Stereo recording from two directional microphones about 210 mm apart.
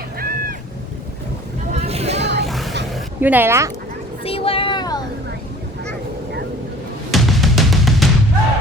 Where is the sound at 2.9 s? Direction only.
10° right (ahead or behind).